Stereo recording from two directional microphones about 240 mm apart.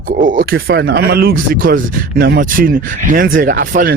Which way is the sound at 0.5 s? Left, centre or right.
Right.